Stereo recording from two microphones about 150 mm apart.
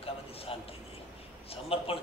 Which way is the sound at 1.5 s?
40° left (ahead or behind).